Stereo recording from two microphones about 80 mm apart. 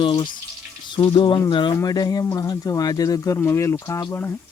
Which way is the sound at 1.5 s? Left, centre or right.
Left.